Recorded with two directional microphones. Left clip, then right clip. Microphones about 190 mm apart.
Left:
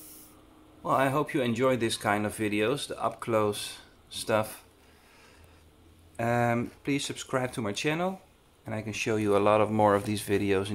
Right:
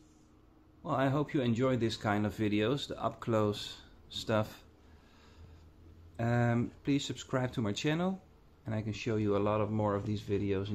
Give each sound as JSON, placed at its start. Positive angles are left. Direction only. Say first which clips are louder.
{"t": 0.8, "sound": "speech", "louder": "left 6 dB", "side_deg": 5}
{"t": 6.1, "sound": "speech", "louder": "left 6 dB", "side_deg": 5}